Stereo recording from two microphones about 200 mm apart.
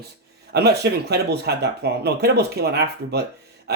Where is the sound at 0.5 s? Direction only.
55° right (ahead or behind).